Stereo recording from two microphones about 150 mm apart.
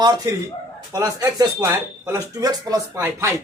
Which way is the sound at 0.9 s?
20° right (ahead or behind).